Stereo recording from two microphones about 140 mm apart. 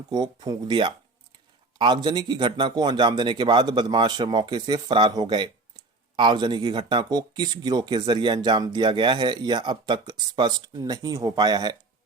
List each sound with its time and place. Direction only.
0.1 s speech: 30° right (ahead or behind)